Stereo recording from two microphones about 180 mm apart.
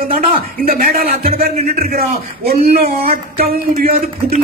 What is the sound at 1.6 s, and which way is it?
Speech, 55° right (ahead or behind).